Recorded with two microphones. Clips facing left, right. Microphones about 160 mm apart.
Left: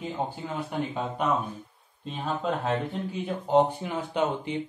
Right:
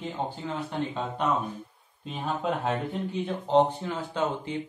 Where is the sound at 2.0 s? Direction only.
Centre (ahead or behind).